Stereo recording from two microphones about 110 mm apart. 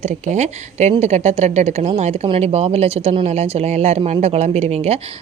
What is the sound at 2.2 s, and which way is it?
Speech, 55° right (ahead or behind).